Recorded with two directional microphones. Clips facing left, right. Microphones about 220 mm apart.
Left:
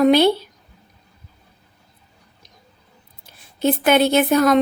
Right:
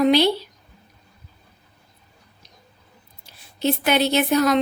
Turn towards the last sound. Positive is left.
turn(degrees=50)  # may be behind; listen again after turning